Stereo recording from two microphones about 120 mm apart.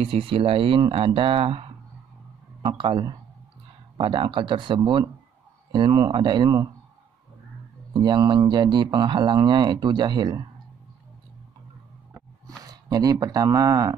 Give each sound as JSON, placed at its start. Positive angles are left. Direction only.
{"t": 0.0, "sound": "speech", "side_deg": -50}
{"t": 7.9, "sound": "speech", "side_deg": -40}
{"t": 12.4, "sound": "speech", "side_deg": -30}